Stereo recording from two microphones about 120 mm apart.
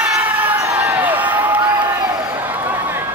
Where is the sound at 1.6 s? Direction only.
35° right (ahead or behind).